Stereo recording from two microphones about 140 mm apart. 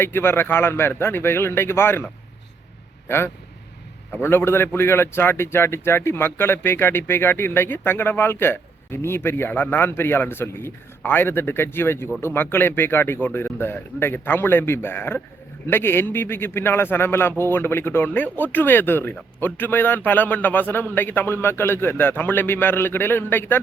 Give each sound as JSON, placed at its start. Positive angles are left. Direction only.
{"t": 0.0, "sound": "a man's voice", "side_deg": 15}
{"t": 4.2, "sound": "a man's voice", "side_deg": 15}